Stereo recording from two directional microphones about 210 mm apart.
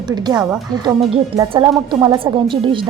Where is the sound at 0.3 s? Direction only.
5° right (ahead or behind).